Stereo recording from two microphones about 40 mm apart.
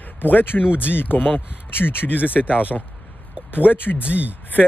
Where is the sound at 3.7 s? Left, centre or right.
Left.